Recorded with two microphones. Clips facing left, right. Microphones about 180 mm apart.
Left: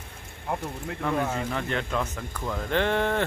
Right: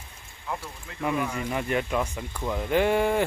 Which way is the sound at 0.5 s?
50° left (ahead or behind).